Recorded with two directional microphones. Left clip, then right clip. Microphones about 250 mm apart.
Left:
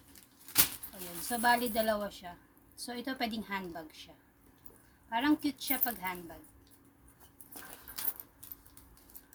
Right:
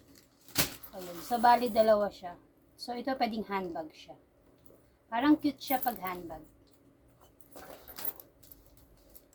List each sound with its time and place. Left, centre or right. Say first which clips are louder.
1.3 s a woman's voice: right 5 dB; left